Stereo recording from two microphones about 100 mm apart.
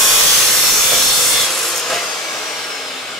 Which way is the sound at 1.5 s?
Centre (ahead or behind).